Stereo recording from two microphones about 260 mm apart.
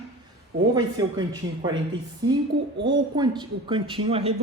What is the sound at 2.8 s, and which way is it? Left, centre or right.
Speech, centre.